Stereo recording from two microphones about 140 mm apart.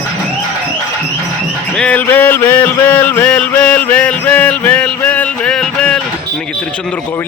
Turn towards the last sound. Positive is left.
turn(degrees=5)  # may be behind; listen again after turning